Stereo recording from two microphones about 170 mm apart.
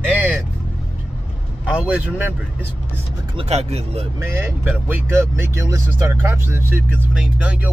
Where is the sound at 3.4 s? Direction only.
40° right (ahead or behind).